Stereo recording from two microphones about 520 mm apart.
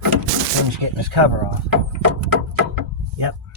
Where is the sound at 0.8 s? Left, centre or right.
Right.